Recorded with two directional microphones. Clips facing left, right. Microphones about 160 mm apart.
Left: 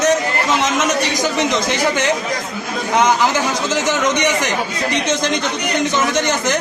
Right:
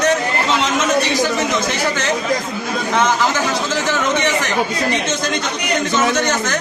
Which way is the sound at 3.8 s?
15° left (ahead or behind).